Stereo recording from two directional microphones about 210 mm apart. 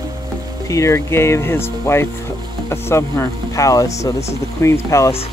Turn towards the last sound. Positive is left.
turn(degrees=15)  # may be behind; listen again after turning